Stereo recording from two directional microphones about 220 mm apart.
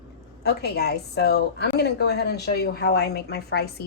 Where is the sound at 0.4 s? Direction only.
45° left (ahead or behind).